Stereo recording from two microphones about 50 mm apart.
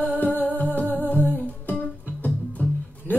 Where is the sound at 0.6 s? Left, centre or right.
Left.